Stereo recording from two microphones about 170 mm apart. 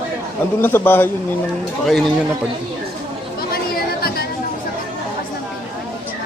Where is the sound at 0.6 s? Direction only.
10° left (ahead or behind).